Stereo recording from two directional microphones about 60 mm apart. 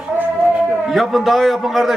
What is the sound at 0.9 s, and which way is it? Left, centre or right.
A man's voice, centre.